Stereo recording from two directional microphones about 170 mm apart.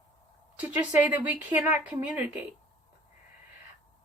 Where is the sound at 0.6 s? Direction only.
10° right (ahead or behind).